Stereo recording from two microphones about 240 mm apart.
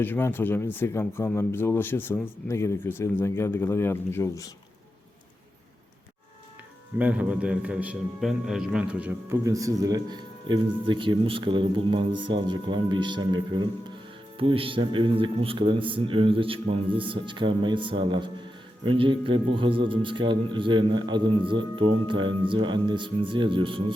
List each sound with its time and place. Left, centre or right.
0.0 s speech: centre
7.0 s a man's voice: centre